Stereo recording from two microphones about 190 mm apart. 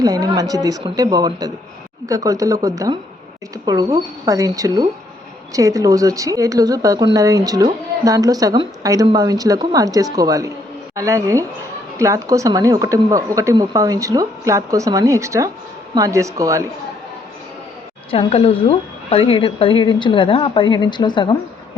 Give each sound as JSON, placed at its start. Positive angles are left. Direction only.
{"t": 0.0, "sound": "speech", "side_deg": -20}
{"t": 18.1, "sound": "a woman's voice", "side_deg": 30}